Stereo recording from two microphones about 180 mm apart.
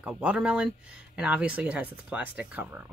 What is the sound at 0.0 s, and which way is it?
Speech, 5° right (ahead or behind).